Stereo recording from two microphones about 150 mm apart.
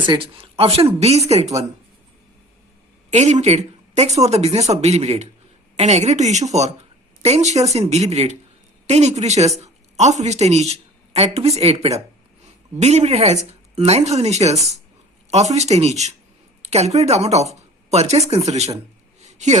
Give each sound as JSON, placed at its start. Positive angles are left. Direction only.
{"t": 0.0, "sound": "speech", "side_deg": -35}
{"t": 3.1, "sound": "a woman's voice", "side_deg": -50}
{"t": 19.2, "sound": "a sound", "side_deg": -50}